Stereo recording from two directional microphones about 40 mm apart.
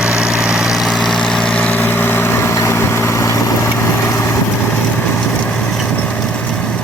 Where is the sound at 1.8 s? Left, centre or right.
Left.